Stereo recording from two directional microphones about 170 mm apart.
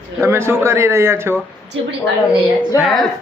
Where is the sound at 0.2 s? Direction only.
15° right (ahead or behind).